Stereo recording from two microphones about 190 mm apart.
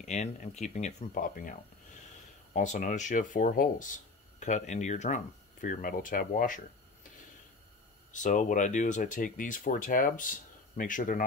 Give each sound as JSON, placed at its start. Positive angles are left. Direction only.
{"t": 0.0, "sound": "speech", "side_deg": 35}
{"t": 8.1, "sound": "speech", "side_deg": 40}